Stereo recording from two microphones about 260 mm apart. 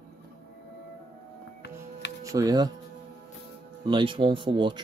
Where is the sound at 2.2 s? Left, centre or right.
Centre.